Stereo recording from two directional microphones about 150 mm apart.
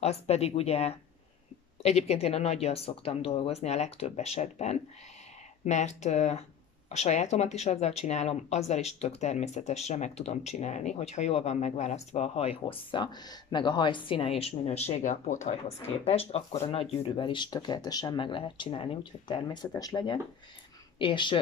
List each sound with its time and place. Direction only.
0.0 s speech: 45° left (ahead or behind)
16.0 s speech: 40° left (ahead or behind)